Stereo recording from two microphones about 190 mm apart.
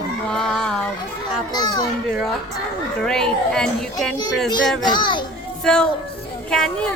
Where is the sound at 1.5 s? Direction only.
20° left (ahead or behind).